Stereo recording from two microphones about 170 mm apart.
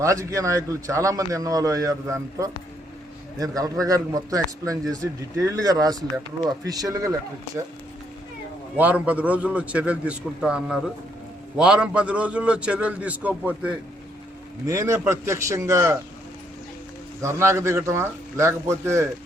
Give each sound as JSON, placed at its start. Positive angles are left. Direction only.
{"t": 0.0, "sound": "a man's voice", "side_deg": -20}
{"t": 8.8, "sound": "a man's voice", "side_deg": -10}
{"t": 14.7, "sound": "a man's voice", "side_deg": -15}
{"t": 17.2, "sound": "a man's voice", "side_deg": -15}